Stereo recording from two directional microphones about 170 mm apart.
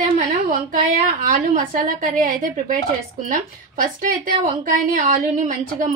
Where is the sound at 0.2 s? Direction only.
55° right (ahead or behind).